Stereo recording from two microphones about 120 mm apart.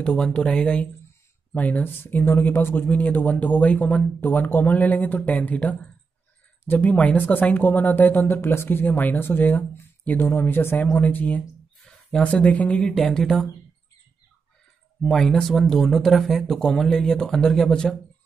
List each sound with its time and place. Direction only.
0.0 s speech: 10° left (ahead or behind)
15.0 s speech: 5° left (ahead or behind)